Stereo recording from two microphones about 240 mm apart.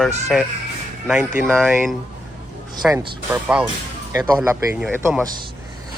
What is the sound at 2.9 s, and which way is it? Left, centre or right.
Speech, centre.